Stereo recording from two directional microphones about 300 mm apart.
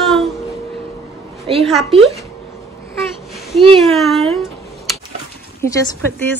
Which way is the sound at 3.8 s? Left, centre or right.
Centre.